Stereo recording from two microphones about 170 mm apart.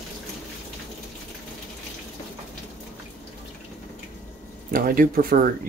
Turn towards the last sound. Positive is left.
turn(degrees=-60)  # may be behind; listen again after turning